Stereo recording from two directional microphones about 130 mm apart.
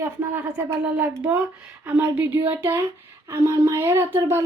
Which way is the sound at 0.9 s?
15° right (ahead or behind).